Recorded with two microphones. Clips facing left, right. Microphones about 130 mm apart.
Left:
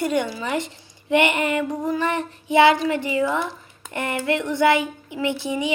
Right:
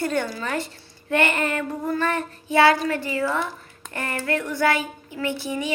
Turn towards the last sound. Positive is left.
turn(degrees=20)  # may be behind; listen again after turning